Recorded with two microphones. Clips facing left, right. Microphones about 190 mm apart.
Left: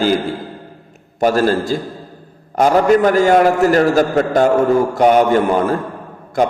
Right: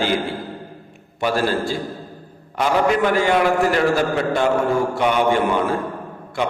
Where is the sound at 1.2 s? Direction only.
45° left (ahead or behind).